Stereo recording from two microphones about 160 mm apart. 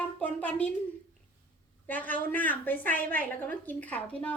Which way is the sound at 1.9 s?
10° left (ahead or behind).